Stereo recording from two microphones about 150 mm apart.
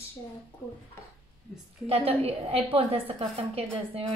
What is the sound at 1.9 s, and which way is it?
A woman's voice, 40° right (ahead or behind).